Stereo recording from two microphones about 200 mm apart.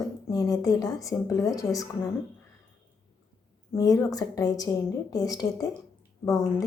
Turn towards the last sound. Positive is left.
turn(degrees=15)  # may be behind; listen again after turning